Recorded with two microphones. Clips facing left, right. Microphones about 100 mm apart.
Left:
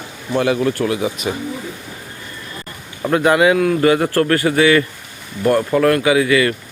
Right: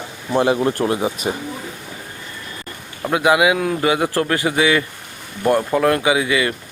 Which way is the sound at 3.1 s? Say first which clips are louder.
Left 2 dB; 10° right (ahead or behind).